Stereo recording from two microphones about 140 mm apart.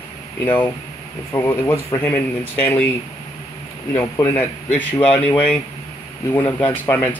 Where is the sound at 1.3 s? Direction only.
20° left (ahead or behind).